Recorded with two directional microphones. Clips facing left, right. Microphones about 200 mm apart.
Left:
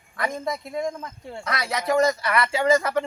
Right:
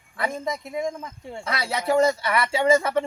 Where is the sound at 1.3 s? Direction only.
25° right (ahead or behind).